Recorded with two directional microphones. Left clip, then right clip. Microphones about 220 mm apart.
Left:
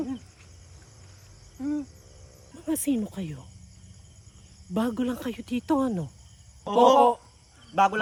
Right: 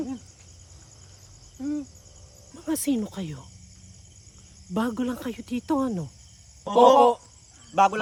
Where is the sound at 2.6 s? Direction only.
10° right (ahead or behind).